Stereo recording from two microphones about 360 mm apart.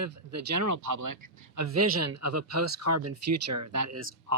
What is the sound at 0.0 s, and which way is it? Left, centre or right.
Speech, right.